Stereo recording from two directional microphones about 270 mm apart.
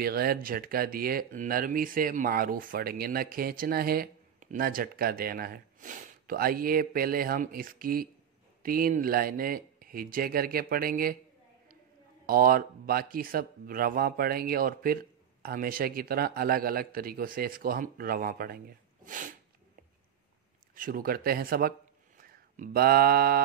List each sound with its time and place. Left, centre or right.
0.0 s speech: right
12.3 s speech: right
19.0 s sneeze: right
20.7 s speech: right